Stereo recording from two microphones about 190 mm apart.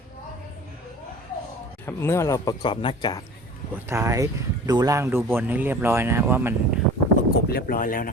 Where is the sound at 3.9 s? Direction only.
15° right (ahead or behind).